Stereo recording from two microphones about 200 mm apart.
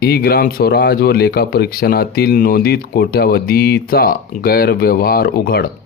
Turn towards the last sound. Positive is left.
turn(degrees=50)  # may be behind; listen again after turning